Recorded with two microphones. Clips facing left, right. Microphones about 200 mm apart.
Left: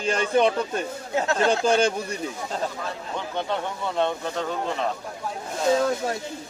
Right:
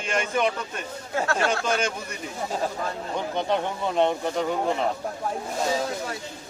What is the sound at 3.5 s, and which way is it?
Speech, 15° right (ahead or behind).